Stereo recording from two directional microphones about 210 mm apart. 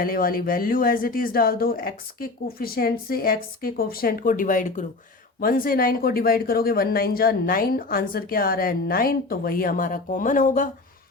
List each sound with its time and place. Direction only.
0.0 s speech: 45° left (ahead or behind)